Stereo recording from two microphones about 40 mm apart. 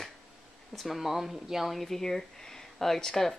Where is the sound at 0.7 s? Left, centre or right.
Centre.